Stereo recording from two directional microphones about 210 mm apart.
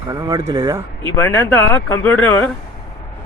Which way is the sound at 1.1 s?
10° left (ahead or behind).